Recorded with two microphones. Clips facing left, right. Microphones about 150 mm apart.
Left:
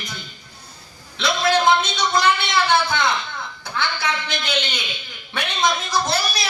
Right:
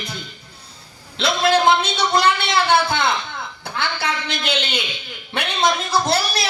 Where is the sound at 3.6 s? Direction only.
60° right (ahead or behind).